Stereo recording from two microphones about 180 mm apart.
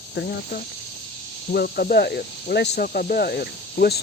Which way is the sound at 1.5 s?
60° left (ahead or behind).